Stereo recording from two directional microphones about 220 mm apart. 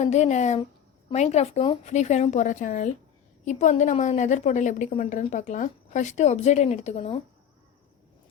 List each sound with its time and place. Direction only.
0.0 s a woman's voice: 30° left (ahead or behind)